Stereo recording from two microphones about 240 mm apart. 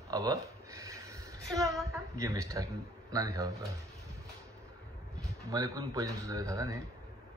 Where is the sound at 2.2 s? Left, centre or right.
Centre.